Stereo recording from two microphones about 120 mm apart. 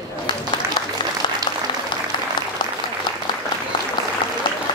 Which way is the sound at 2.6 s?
40° left (ahead or behind).